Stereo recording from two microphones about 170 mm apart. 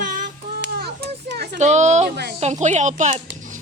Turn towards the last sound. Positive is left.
turn(degrees=-45)  # may be behind; listen again after turning